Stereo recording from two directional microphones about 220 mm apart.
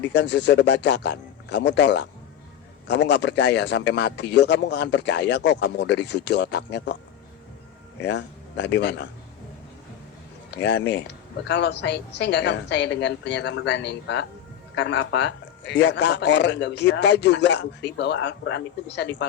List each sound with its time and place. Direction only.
0.1 s speech: 50° left (ahead or behind)
8.0 s speech: 55° left (ahead or behind)
10.6 s speech: 50° left (ahead or behind)